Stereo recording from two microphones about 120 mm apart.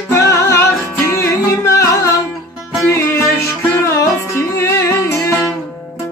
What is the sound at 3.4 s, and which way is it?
Music, 25° left (ahead or behind).